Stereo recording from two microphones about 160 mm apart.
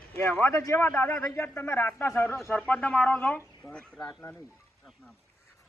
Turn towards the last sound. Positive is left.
turn(degrees=10)  # may be behind; listen again after turning